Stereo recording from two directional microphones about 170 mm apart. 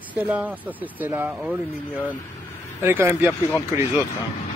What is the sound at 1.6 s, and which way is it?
Speech, 10° left (ahead or behind).